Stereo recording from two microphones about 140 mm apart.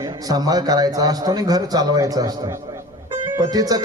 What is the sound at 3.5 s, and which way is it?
Speech, 25° right (ahead or behind).